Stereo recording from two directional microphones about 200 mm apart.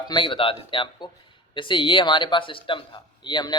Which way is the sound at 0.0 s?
25° left (ahead or behind).